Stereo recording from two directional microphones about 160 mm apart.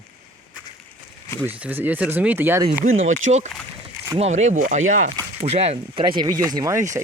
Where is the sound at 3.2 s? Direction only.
45° right (ahead or behind).